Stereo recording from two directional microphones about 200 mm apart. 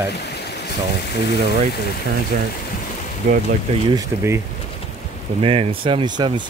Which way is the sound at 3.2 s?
40° right (ahead or behind).